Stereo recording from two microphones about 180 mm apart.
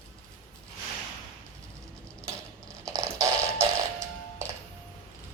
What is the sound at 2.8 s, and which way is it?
Music, 20° right (ahead or behind).